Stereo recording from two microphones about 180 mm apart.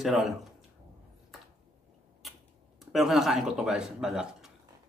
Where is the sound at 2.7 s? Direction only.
Centre (ahead or behind).